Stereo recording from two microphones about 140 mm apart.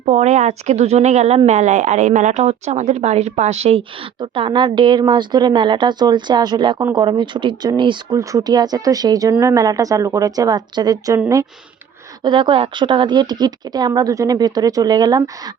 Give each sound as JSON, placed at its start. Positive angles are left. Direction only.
{"t": 0.1, "sound": "a woman's voice", "side_deg": -55}
{"t": 12.2, "sound": "a woman's voice", "side_deg": -35}